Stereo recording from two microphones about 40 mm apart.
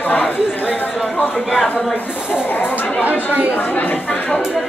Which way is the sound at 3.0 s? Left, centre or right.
Right.